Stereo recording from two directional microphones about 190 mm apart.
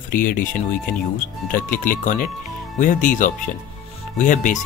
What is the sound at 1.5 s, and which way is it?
Speech, 45° left (ahead or behind).